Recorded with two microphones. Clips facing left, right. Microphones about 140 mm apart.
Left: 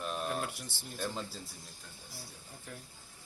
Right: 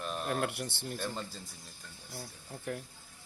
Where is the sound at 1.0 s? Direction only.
5° left (ahead or behind).